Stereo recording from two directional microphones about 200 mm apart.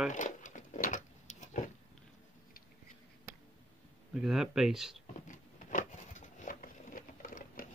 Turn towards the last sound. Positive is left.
turn(degrees=40)  # may be behind; listen again after turning